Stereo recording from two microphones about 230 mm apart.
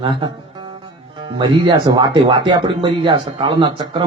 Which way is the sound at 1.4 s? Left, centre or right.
Centre.